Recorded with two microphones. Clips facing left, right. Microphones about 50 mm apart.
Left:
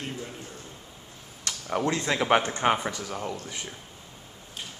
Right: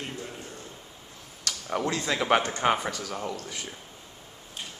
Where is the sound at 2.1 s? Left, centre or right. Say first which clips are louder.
Even; centre.